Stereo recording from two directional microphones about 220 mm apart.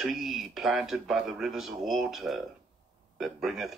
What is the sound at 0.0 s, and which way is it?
Speech, centre (ahead or behind).